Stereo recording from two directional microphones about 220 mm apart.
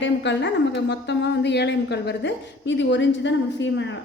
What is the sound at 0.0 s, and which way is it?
A woman's voice, 55° left (ahead or behind).